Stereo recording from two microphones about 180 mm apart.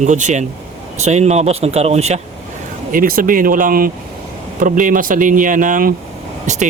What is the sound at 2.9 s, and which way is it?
Speech, 50° right (ahead or behind).